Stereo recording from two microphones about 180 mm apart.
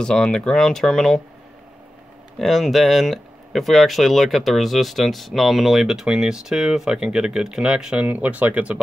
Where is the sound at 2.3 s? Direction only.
Centre (ahead or behind).